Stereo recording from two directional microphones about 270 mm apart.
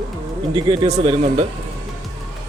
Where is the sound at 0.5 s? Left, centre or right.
Centre.